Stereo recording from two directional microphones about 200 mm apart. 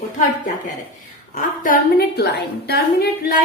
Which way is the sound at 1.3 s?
45° left (ahead or behind).